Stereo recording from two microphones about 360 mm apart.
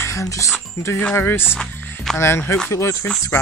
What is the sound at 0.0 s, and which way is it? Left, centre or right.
Speech, centre.